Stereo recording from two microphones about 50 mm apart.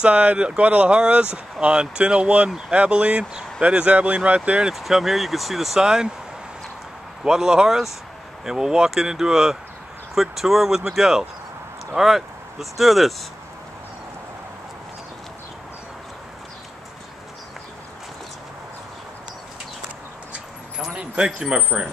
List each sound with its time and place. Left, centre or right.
0.0 s speech: right
4.6 s speech: centre
7.2 s speech: centre
20.9 s speech: right
21.4 s speech: centre